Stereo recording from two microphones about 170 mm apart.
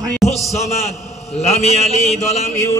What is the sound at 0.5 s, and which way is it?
A man's voice, 40° left (ahead or behind).